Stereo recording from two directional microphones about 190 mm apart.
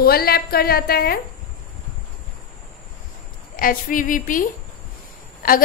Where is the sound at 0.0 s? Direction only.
55° left (ahead or behind).